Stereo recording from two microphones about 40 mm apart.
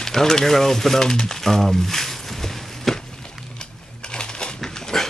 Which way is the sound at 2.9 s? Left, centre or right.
Centre.